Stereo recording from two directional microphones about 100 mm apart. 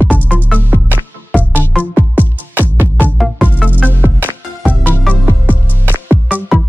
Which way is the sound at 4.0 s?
20° right (ahead or behind).